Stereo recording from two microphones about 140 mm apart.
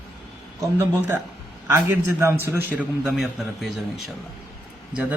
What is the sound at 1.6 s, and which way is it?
A man's voice, 15° right (ahead or behind).